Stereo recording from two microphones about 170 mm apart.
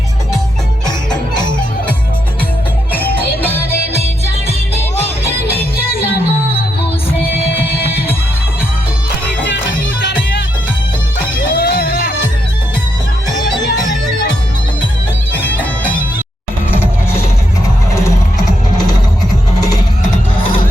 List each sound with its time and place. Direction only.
0.9 s music: 25° left (ahead or behind)
2.9 s music: 10° left (ahead or behind)
5.0 s music: 10° left (ahead or behind)
7.3 s music: 75° left (ahead or behind)
11.5 s music: 60° left (ahead or behind)
13.2 s music: 25° left (ahead or behind)
15.4 s music: 10° left (ahead or behind)
17.9 s music: 20° left (ahead or behind)